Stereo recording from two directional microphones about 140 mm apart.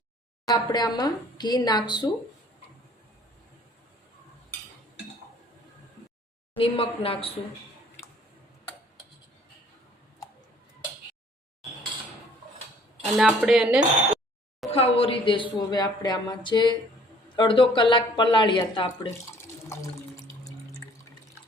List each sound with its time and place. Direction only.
0.4 s a woman's voice: 30° left (ahead or behind)
6.6 s speech: 40° left (ahead or behind)
13.1 s speech: 5° right (ahead or behind)
14.7 s a woman's voice: 45° left (ahead or behind)
19.6 s water: 20° left (ahead or behind)